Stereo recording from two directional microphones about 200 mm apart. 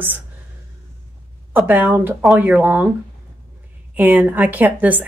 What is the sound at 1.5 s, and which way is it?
A woman's voice, 10° right (ahead or behind).